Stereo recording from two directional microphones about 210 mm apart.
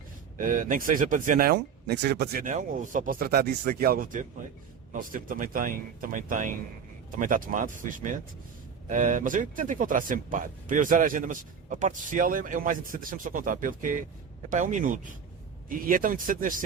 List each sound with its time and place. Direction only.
0.3 s speech: 40° right (ahead or behind)